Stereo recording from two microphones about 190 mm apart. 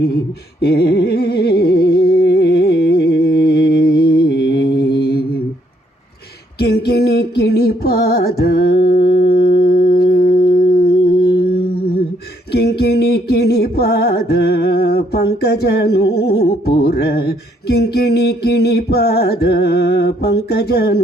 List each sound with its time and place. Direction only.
0.6 s music: 60° left (ahead or behind)
6.6 s music: 55° left (ahead or behind)